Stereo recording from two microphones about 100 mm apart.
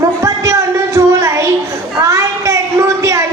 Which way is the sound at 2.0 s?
30° right (ahead or behind).